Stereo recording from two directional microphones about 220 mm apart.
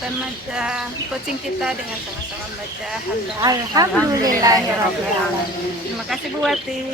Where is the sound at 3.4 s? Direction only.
15° right (ahead or behind).